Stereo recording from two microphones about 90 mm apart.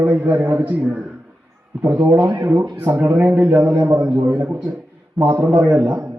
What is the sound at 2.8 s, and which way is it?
Speech, 20° right (ahead or behind).